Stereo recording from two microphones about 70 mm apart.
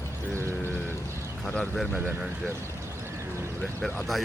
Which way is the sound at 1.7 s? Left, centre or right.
Centre.